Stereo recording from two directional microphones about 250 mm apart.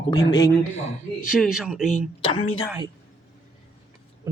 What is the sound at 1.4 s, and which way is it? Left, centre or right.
Speech, centre.